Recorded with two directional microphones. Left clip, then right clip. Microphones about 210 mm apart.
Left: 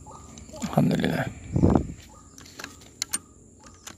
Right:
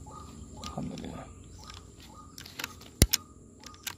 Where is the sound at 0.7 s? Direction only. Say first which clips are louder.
Left 19 dB; 50° left (ahead or behind).